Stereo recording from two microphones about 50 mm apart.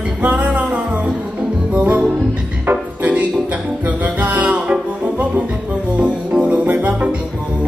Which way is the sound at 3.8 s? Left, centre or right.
Right.